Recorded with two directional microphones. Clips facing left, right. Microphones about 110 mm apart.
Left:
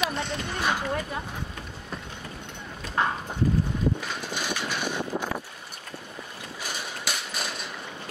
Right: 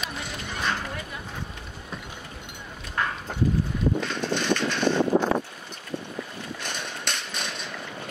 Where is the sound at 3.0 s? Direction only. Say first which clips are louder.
Left 3 dB; 25° left (ahead or behind).